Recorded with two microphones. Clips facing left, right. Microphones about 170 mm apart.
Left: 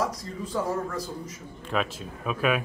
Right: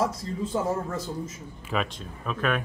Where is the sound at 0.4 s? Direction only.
25° right (ahead or behind).